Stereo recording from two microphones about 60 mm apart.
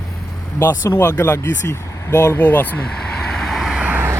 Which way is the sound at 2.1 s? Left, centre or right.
Left.